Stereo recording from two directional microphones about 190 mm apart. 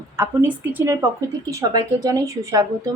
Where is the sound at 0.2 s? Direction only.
10° right (ahead or behind).